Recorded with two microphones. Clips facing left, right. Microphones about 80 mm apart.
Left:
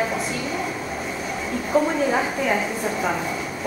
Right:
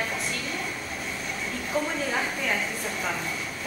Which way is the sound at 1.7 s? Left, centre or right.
Centre.